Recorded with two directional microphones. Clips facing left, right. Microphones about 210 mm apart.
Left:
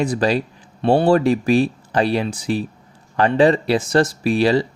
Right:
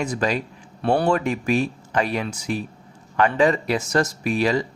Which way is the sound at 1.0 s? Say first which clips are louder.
Left 6 dB; 35° left (ahead or behind).